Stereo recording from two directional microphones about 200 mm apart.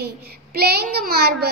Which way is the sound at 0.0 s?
50° right (ahead or behind).